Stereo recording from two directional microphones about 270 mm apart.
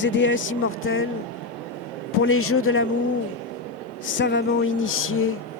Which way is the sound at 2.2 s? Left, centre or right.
Left.